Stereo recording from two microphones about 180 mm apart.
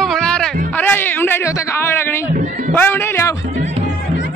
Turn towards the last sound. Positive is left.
turn(degrees=15)  # may be behind; listen again after turning